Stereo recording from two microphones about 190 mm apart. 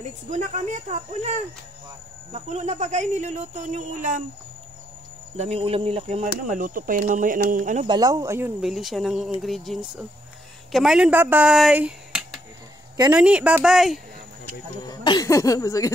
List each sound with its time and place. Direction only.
0.3 s speech: 40° right (ahead or behind)
2.3 s speech: 35° right (ahead or behind)
5.4 s speech: 30° right (ahead or behind)
6.4 s speech: 45° right (ahead or behind)
7.8 s speech: 20° right (ahead or behind); by 13.9 s centre (ahead or behind)
14.9 s speech: 20° left (ahead or behind)